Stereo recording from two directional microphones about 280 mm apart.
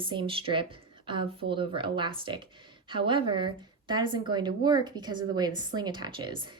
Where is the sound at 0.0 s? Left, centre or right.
Centre.